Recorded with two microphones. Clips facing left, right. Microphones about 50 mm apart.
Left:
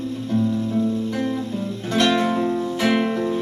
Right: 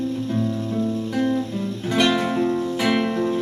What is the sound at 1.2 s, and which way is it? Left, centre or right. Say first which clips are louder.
Music: right 2 dB; centre.